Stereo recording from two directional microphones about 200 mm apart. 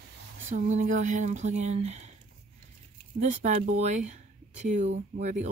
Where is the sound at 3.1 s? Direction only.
35° right (ahead or behind).